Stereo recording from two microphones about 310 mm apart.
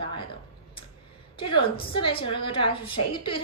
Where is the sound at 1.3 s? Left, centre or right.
Centre.